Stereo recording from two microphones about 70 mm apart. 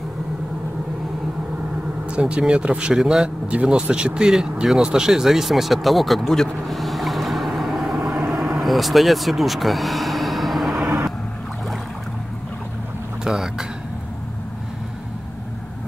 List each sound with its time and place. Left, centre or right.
2.0 s speech: centre
13.2 s speech: centre